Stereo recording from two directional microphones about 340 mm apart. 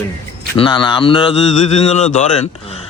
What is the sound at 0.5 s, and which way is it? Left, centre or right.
A man's voice, centre.